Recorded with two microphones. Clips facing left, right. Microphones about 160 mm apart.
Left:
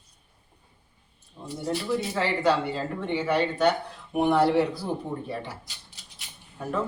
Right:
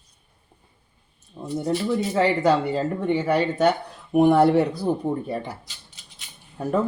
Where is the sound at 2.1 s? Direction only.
45° right (ahead or behind).